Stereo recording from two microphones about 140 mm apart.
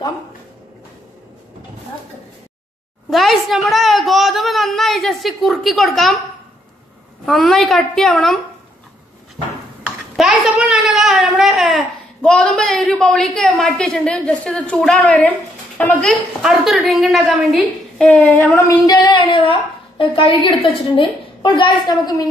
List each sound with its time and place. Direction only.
3.1 s a woman's voice: centre (ahead or behind)
7.2 s a woman's voice: centre (ahead or behind)
9.8 s a sound: 5° right (ahead or behind)
15.8 s a woman's voice: 10° left (ahead or behind)
18.9 s a woman's voice: 35° left (ahead or behind)